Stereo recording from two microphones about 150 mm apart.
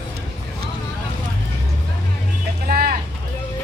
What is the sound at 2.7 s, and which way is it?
Vehicle, 80° right.